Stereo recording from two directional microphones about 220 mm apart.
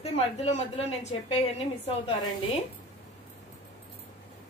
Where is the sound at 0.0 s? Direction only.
30° left (ahead or behind).